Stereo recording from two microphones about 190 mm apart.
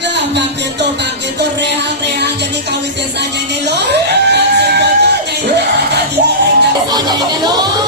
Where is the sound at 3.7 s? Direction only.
65° right (ahead or behind).